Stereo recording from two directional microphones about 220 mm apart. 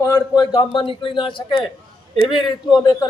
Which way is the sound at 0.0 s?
15° left (ahead or behind).